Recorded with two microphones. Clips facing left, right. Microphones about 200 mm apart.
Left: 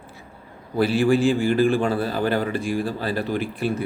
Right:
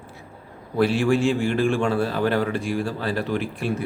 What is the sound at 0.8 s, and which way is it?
A man's voice, centre (ahead or behind).